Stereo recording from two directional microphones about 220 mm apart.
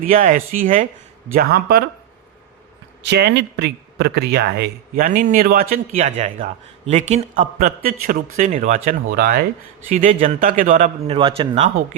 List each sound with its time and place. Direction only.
0.0 s speech: 40° right (ahead or behind)
3.0 s speech: 50° right (ahead or behind); by 11.7 s 25° right (ahead or behind)